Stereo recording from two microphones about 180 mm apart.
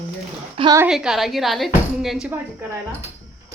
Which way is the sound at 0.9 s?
Centre (ahead or behind).